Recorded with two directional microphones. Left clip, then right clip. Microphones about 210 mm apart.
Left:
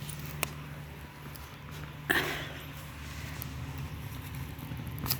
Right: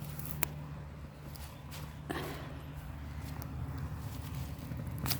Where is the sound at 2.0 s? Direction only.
Centre (ahead or behind).